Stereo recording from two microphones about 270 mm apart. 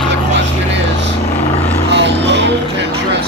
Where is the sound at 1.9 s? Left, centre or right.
Right.